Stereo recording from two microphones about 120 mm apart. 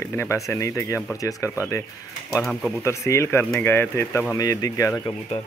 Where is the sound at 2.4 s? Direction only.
5° left (ahead or behind).